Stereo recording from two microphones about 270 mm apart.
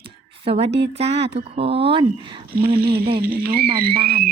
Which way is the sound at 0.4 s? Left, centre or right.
Right.